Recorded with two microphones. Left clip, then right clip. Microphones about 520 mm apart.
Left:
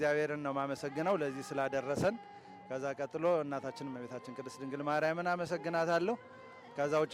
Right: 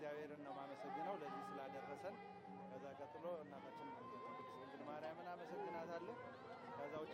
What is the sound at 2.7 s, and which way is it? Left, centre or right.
Speech, left.